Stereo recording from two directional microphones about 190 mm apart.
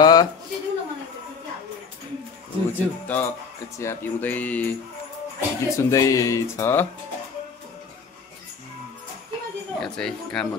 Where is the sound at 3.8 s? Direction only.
10° left (ahead or behind).